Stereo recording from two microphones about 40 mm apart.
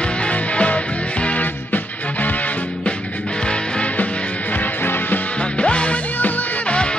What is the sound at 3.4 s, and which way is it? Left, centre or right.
Music, left.